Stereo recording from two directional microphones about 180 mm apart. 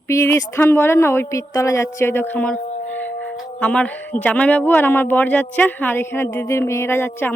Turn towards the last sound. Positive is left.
turn(degrees=10)  # may be behind; listen again after turning